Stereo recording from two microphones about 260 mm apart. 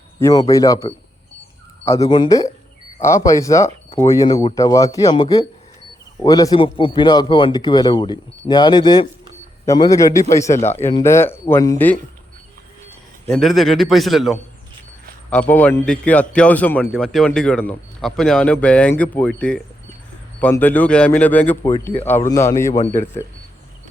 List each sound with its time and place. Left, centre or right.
0.2 s a man's voice: centre
2.0 s a man's voice: centre
10.6 s speech: left
10.8 s a man's voice: centre
13.2 s a man's voice: centre